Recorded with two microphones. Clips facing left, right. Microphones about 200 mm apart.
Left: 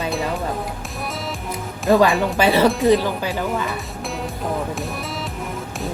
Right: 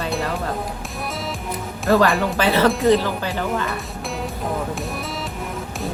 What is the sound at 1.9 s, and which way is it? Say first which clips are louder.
Speech: left 1 dB; 15° left (ahead or behind).